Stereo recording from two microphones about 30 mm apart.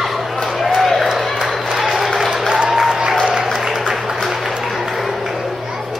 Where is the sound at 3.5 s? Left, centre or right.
Centre.